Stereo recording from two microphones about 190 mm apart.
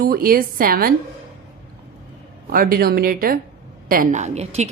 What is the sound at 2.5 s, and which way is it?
A woman's voice, 50° right (ahead or behind).